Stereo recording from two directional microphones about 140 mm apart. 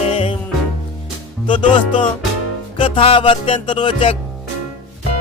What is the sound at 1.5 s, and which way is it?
Music, 35° left (ahead or behind).